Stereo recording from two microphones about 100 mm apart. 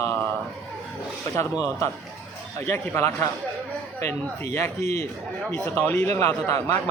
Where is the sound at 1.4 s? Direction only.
30° left (ahead or behind).